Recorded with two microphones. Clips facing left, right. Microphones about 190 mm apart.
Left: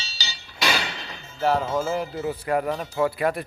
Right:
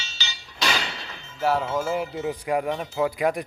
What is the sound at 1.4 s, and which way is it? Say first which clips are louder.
Speech: left 1 dB; 5° right (ahead or behind).